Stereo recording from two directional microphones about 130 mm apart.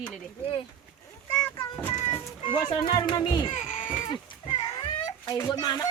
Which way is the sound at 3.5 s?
75° left (ahead or behind).